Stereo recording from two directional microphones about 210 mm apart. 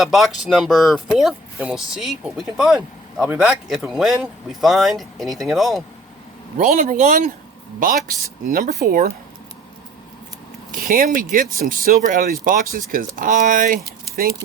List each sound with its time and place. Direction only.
0.0 s speech: centre (ahead or behind)
6.6 s speech: 40° right (ahead or behind)
10.7 s speech: 45° right (ahead or behind)